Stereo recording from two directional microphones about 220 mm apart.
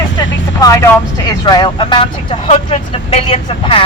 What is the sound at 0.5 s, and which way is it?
Speech, 15° left (ahead or behind).